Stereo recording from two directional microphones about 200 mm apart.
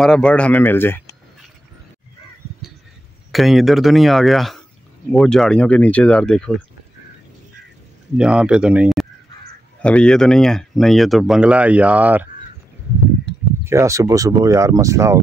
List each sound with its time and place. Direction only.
0.0 s speech: 5° left (ahead or behind)
3.3 s speech: centre (ahead or behind)
8.2 s speech: 5° right (ahead or behind)
13.7 s speech: 15° right (ahead or behind)